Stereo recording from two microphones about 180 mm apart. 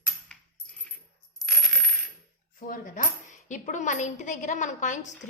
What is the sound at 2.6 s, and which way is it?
A woman's voice, 50° left (ahead or behind).